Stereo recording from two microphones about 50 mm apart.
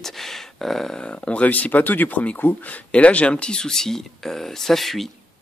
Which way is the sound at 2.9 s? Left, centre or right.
Left.